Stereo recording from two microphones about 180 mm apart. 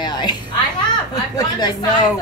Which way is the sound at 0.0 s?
25° left (ahead or behind).